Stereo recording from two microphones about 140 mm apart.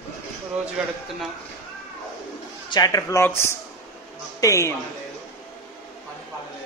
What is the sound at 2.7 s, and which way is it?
A man's voice, 25° left (ahead or behind).